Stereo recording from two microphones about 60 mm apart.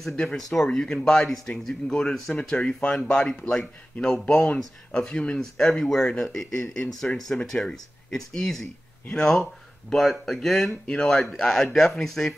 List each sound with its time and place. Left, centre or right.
0.1 s speech: centre
5.0 s speech: centre